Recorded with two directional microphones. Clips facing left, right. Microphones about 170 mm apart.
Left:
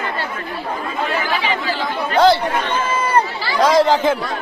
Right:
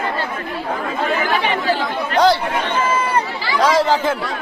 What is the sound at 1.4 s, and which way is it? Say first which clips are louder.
Speech: right 3 dB; 55° right (ahead or behind).